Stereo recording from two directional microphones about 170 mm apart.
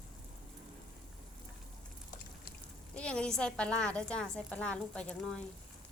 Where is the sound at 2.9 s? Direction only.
5° left (ahead or behind).